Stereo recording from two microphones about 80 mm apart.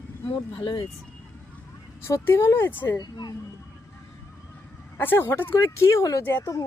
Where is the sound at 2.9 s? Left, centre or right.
Left.